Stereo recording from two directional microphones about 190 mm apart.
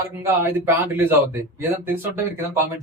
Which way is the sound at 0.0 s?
15° right (ahead or behind).